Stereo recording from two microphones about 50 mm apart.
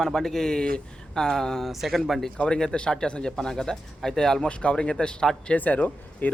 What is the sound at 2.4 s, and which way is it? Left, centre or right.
Speech, centre.